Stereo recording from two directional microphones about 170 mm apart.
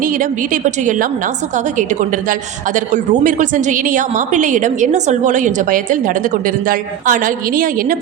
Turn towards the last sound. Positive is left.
turn(degrees=-55)  # may be behind; listen again after turning